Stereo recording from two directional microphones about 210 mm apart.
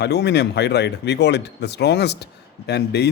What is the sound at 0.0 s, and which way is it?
A man's voice, 55° left (ahead or behind).